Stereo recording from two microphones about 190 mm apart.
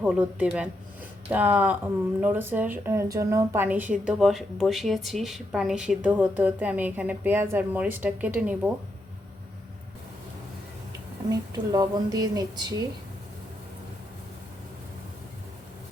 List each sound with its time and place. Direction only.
0.0 s speech: 5° right (ahead or behind)
11.3 s a woman's voice: 20° right (ahead or behind)